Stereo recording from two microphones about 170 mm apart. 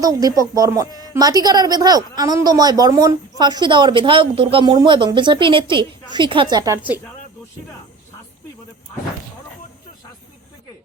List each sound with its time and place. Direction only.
0.0 s a woman's voice: 20° right (ahead or behind)